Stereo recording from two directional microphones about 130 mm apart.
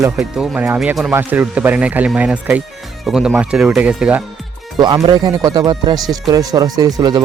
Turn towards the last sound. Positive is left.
turn(degrees=-25)  # may be behind; listen again after turning